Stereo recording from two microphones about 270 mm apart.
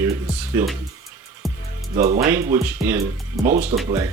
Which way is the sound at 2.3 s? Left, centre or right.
Centre.